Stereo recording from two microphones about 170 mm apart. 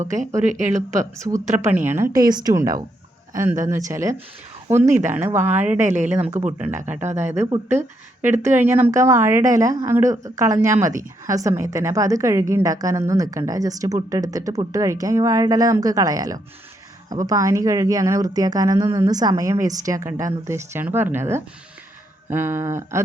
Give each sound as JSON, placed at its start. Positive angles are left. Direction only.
{"t": 0.9, "sound": "a woman's voice", "side_deg": -20}